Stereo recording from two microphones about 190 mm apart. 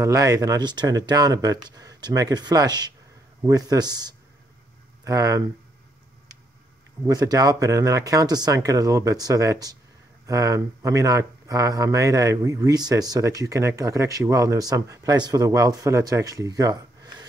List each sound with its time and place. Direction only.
0.0 s speech: 20° right (ahead or behind)
7.1 s speech: 20° right (ahead or behind)